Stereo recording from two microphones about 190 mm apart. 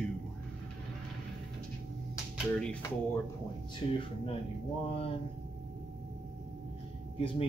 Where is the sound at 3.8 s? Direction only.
25° left (ahead or behind).